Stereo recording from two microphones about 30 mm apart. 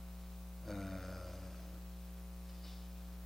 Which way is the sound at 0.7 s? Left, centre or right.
Centre.